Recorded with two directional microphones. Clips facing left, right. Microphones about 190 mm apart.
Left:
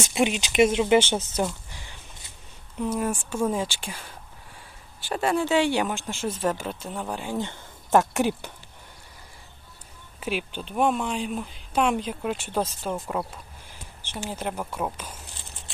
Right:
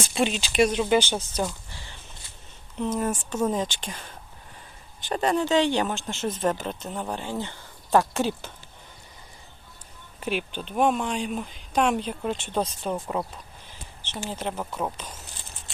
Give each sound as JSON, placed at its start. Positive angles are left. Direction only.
{"t": 0.1, "sound": "speech", "side_deg": 15}
{"t": 1.7, "sound": "a sound", "side_deg": 15}
{"t": 2.7, "sound": "speech", "side_deg": 10}
{"t": 10.2, "sound": "speech", "side_deg": 5}
{"t": 13.7, "sound": "a sound", "side_deg": 10}
{"t": 14.3, "sound": "speech", "side_deg": 10}